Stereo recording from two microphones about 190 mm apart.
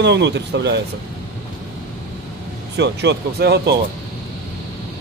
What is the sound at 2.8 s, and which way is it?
Speech, 60° right (ahead or behind).